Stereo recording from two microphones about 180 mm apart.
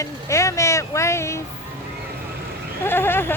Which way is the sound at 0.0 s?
15° left (ahead or behind).